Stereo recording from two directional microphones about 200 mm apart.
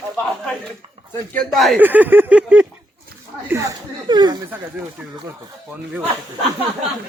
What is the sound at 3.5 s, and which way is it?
Chuckle, 15° right (ahead or behind).